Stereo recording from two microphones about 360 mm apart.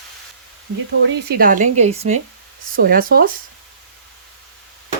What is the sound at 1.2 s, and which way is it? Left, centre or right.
Speech, right.